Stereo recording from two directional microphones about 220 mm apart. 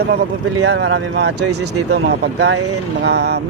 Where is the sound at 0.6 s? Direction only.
55° right (ahead or behind).